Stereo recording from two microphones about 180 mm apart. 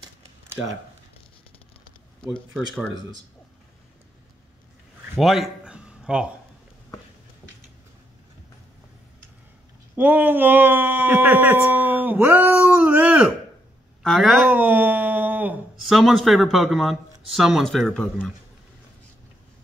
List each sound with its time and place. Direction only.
2.5 s speech: centre (ahead or behind)
5.1 s a sound: centre (ahead or behind)
9.9 s speech: 10° right (ahead or behind)
14.4 s speech: 10° right (ahead or behind)